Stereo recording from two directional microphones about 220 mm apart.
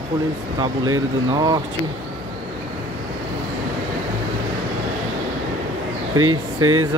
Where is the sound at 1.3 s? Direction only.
20° right (ahead or behind).